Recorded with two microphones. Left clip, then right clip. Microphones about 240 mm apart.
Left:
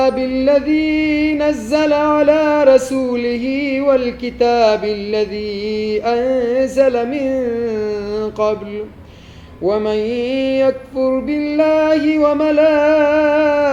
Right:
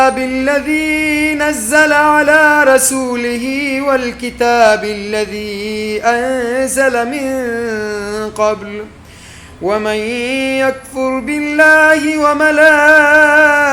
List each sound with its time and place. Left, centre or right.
0.0 s music: centre
1.5 s a sound: centre
9.6 s music: centre